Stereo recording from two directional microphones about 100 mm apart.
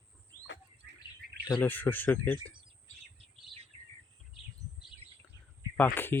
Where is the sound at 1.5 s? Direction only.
20° left (ahead or behind).